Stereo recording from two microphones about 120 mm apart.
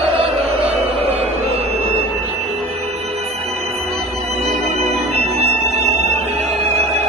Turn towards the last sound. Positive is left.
turn(degrees=-60)  # may be behind; listen again after turning